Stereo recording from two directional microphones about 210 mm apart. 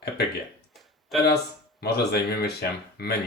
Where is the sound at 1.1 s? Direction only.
Centre (ahead or behind).